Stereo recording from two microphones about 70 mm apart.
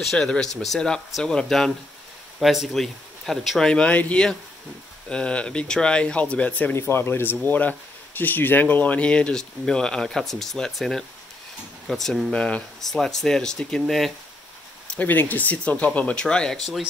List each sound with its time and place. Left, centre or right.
0.0 s speech: centre
6.7 s speech: left; by 14.1 s centre
14.9 s speech: left